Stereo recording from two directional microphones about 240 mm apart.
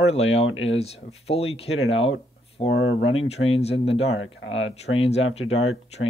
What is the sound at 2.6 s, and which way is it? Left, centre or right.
Speech, left.